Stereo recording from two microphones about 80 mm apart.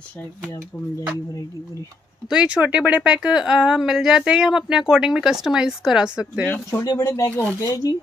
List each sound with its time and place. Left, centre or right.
2.2 s a woman's voice: centre
6.5 s speech: left
6.9 s speech: left
7.2 s speech: left
7.6 s speech: left